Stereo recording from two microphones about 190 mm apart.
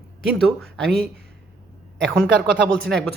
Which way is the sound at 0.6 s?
5° left (ahead or behind).